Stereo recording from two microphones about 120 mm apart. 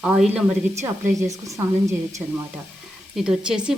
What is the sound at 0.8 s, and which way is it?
Speech, 25° right (ahead or behind).